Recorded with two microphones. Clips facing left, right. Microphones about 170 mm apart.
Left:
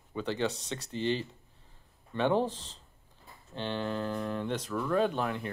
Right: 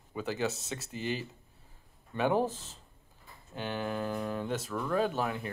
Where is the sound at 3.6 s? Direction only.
10° right (ahead or behind).